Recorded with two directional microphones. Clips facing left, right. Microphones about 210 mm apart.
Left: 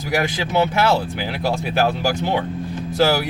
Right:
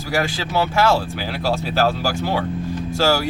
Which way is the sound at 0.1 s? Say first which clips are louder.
Left 1 dB; 20° left (ahead or behind).